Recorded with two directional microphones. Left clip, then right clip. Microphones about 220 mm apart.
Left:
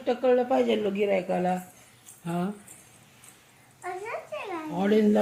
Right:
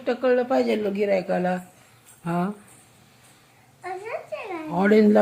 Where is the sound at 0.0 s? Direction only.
5° right (ahead or behind).